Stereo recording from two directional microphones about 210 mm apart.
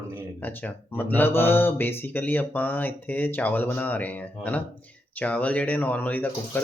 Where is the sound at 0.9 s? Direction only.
10° left (ahead or behind).